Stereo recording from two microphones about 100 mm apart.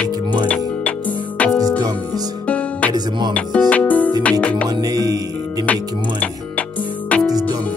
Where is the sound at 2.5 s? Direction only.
15° left (ahead or behind).